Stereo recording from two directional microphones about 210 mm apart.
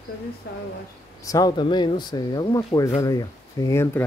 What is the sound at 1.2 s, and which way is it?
Speech, 15° left (ahead or behind).